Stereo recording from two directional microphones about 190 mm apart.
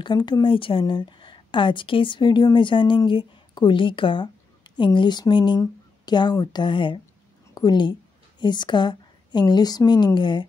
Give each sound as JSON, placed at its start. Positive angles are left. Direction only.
{"t": 0.0, "sound": "a woman's voice", "side_deg": 25}